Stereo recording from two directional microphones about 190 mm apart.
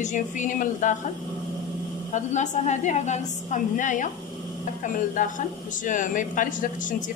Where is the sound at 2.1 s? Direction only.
40° left (ahead or behind).